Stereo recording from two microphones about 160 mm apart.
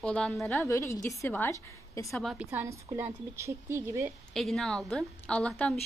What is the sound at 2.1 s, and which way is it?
Speech, centre (ahead or behind).